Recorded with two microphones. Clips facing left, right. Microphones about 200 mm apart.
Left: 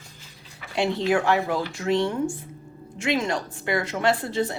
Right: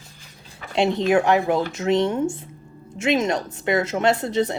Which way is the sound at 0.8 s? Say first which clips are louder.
Right 4 dB; 20° right (ahead or behind).